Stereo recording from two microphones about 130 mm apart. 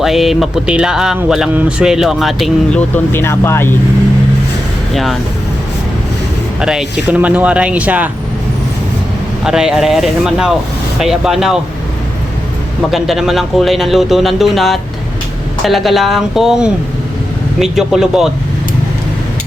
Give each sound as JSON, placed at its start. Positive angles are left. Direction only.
{"t": 0.0, "sound": "speech", "side_deg": 0}
{"t": 2.7, "sound": "speech", "side_deg": 15}
{"t": 6.6, "sound": "speech", "side_deg": -5}
{"t": 9.4, "sound": "speech", "side_deg": -5}
{"t": 12.9, "sound": "speech", "side_deg": 0}